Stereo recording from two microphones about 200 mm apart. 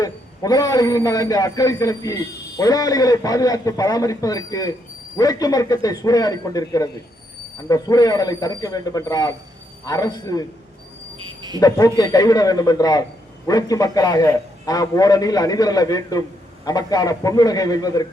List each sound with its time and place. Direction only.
0.0 s a man's voice: 20° left (ahead or behind)
11.2 s cricket: 20° right (ahead or behind)
11.9 s a man's voice: 20° left (ahead or behind)